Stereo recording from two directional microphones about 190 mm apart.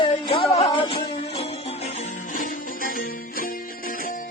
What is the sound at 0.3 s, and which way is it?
Music, 30° left (ahead or behind).